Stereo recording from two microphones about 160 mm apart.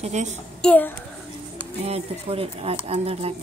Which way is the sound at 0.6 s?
10° left (ahead or behind).